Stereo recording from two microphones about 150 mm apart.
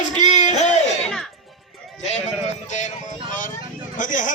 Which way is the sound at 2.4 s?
50° left (ahead or behind).